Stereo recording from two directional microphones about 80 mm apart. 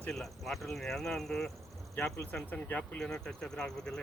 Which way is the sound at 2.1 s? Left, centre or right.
Left.